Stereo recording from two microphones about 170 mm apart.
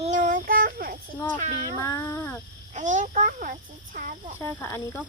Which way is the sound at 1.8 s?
15° left (ahead or behind).